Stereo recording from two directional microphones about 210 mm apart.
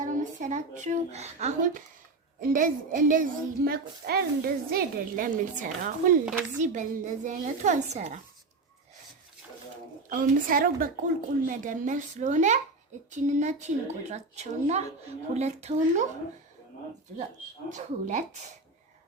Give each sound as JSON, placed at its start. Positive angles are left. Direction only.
{"t": 0.0, "sound": "a woman's voice", "side_deg": -35}
{"t": 10.1, "sound": "a woman's voice", "side_deg": -40}
{"t": 17.7, "sound": "speech", "side_deg": -35}